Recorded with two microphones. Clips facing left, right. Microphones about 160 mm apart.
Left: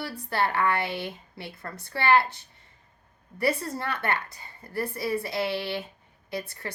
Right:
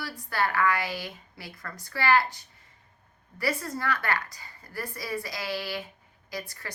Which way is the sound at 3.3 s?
30° left (ahead or behind).